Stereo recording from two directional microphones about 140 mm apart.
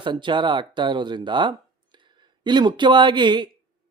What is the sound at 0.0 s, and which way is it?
A man's voice, 35° right (ahead or behind).